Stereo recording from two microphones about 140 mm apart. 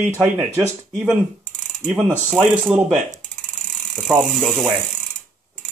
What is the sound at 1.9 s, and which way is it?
Speech, 10° right (ahead or behind).